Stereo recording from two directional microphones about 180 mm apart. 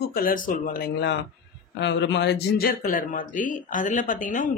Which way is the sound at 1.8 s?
75° left (ahead or behind).